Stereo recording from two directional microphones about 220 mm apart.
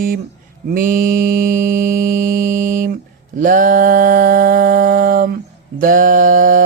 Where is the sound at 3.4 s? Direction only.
40° right (ahead or behind).